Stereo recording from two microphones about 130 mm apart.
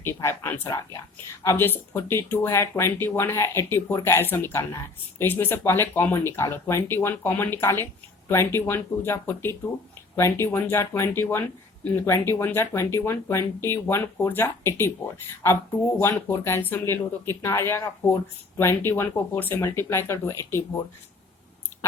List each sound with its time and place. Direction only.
0.0 s speech: 20° left (ahead or behind)